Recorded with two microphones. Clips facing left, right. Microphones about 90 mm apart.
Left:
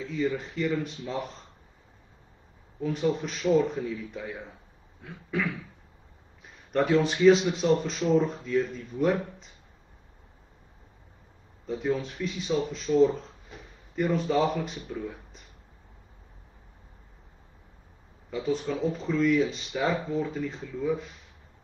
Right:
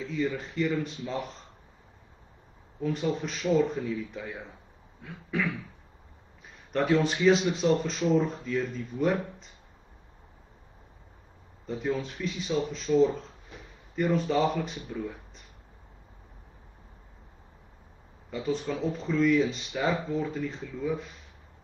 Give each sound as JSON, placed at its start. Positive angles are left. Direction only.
{"t": 0.1, "sound": "speech", "side_deg": 0}
{"t": 2.8, "sound": "speech", "side_deg": 0}
{"t": 6.7, "sound": "speech", "side_deg": 0}
{"t": 11.6, "sound": "speech", "side_deg": 0}
{"t": 18.3, "sound": "speech", "side_deg": 0}